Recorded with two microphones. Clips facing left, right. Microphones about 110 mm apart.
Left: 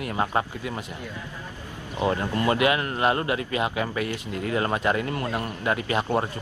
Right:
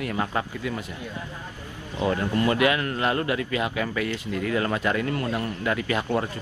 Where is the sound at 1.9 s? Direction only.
25° left (ahead or behind).